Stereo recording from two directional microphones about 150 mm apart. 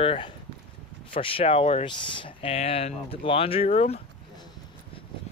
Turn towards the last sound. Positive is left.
turn(degrees=45)  # may be behind; listen again after turning